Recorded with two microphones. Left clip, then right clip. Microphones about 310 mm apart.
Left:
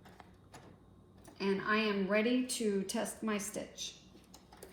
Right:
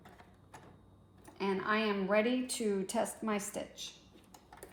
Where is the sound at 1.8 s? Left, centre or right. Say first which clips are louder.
Right 1 dB; right.